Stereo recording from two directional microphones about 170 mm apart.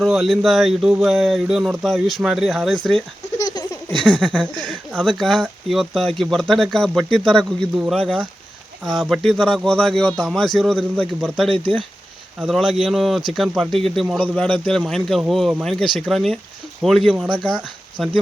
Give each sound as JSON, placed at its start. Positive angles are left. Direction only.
{"t": 0.0, "sound": "speech", "side_deg": 0}
{"t": 3.3, "sound": "laughter", "side_deg": 25}
{"t": 4.0, "sound": "speech", "side_deg": 5}
{"t": 14.3, "sound": "speech", "side_deg": 5}